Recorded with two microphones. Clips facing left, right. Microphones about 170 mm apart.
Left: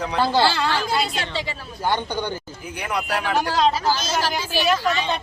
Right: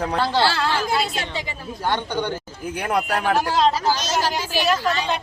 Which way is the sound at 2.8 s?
50° right (ahead or behind).